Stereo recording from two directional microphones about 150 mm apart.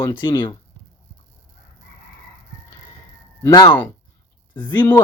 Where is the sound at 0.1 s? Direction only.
35° left (ahead or behind).